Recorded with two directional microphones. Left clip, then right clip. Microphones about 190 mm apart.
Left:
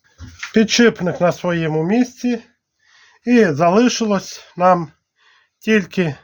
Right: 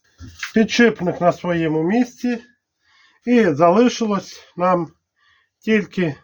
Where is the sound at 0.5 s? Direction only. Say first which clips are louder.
Left 2 dB; 55° left (ahead or behind).